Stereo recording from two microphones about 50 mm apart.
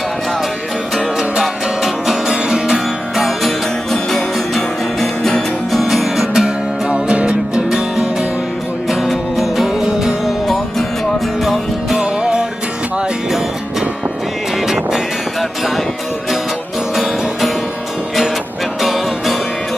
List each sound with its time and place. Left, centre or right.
0.9 s music: centre
8.9 s music: centre
10.4 s music: centre
11.9 s music: centre
14.7 s music: centre
16.9 s music: centre
18.8 s music: centre